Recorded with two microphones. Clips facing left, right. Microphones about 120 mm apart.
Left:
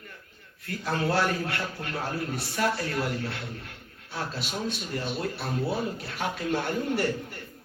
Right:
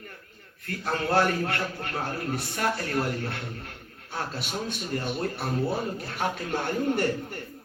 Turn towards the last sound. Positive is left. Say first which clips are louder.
# right 1 dB
turn(degrees=-45)  # may be behind; listen again after turning